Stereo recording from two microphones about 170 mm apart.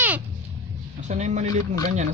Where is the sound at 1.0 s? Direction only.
45° right (ahead or behind).